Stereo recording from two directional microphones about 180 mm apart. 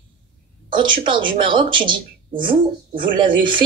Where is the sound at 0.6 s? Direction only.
25° right (ahead or behind).